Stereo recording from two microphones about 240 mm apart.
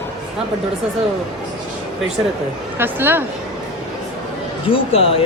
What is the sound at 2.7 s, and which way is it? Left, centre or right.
Speech, centre.